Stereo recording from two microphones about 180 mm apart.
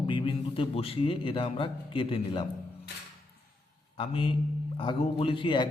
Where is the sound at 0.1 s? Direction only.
30° left (ahead or behind).